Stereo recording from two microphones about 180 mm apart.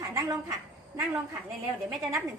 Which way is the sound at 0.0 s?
20° right (ahead or behind).